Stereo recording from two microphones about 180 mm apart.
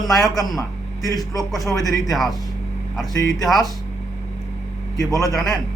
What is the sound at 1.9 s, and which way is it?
Speech, centre (ahead or behind).